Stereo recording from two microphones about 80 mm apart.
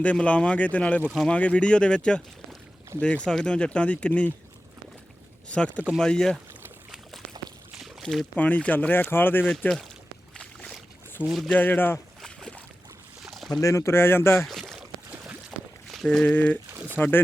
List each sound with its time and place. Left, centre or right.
0.0 s speech: centre
2.9 s speech: right
3.2 s speech: centre
5.5 s speech: centre
8.0 s speech: centre
8.4 s speech: centre
9.5 s speech: centre
10.3 s boat: centre
11.4 s speech: left
12.2 s boat: centre
13.2 s rowboat: centre
13.6 s speech: left
14.4 s boat: centre
16.0 s speech: centre